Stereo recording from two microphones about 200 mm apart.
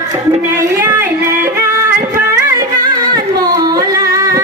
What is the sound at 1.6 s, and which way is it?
Music, 10° right (ahead or behind).